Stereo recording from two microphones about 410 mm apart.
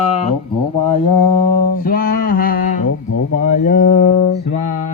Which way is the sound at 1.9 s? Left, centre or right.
Left.